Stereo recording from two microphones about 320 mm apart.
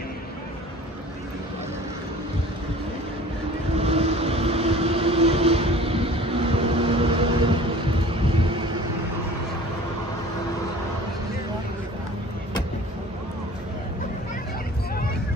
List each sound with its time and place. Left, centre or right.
3.8 s vehicle: centre